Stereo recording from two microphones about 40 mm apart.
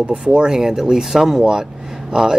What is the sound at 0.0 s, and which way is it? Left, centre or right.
Speech, right.